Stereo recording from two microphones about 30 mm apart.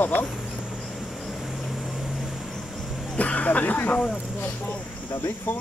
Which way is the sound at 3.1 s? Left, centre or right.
Left.